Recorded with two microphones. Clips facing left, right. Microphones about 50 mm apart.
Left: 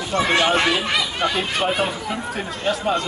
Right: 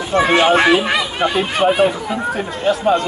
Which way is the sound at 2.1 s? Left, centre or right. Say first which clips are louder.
Right 5 dB; centre.